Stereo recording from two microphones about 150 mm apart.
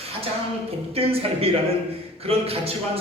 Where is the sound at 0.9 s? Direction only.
40° right (ahead or behind).